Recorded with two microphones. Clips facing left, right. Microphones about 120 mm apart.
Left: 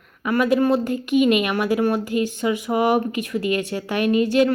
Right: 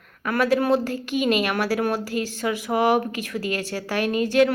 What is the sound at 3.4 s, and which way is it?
Speech, 40° right (ahead or behind).